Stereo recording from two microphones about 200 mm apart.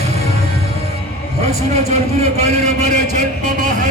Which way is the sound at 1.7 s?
35° right (ahead or behind).